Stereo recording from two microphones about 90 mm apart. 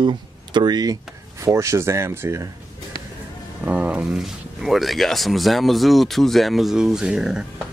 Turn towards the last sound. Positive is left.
turn(degrees=-5)  # may be behind; listen again after turning